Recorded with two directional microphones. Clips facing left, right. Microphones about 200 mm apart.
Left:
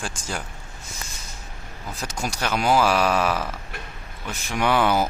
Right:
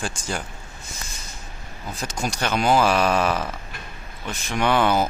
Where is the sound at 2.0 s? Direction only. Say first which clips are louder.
Right 2 dB; 5° left (ahead or behind).